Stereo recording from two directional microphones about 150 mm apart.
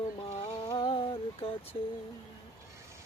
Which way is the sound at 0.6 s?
30° left (ahead or behind).